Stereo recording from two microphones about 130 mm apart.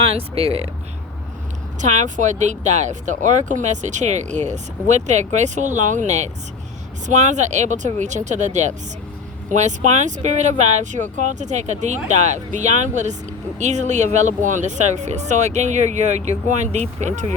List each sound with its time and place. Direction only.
0.0 s speech: 45° right (ahead or behind)
1.8 s speech: 70° right (ahead or behind)